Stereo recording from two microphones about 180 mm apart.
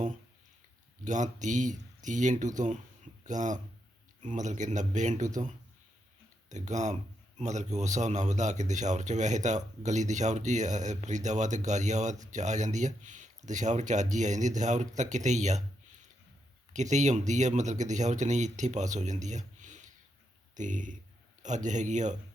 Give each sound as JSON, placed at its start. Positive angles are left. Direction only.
{"t": 1.0, "sound": "speech", "side_deg": -45}
{"t": 6.5, "sound": "speech", "side_deg": -40}